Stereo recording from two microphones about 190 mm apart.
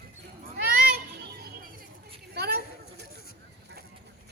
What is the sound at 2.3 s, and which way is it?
Chatter, 55° right (ahead or behind).